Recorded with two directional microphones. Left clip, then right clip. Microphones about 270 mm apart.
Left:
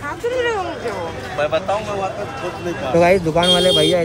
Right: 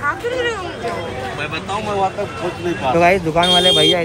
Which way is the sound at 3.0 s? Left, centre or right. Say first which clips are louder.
Even; centre.